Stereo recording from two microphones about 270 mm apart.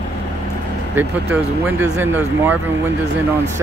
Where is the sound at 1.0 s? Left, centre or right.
Centre.